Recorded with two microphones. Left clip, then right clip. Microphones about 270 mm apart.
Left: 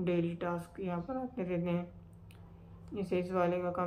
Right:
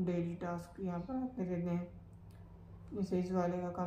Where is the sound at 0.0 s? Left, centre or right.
Centre.